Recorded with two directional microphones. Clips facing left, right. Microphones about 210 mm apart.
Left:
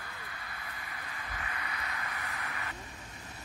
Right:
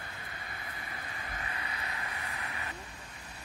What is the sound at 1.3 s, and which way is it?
Vehicle, 30° right (ahead or behind).